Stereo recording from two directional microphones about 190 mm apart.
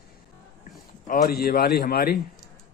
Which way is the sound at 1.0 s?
50° left (ahead or behind).